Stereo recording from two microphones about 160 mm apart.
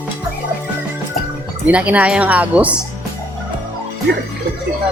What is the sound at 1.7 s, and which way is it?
A woman's voice, 10° right (ahead or behind).